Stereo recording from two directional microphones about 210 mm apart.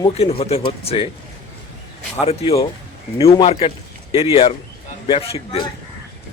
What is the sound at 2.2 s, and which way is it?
Speech, 30° left (ahead or behind).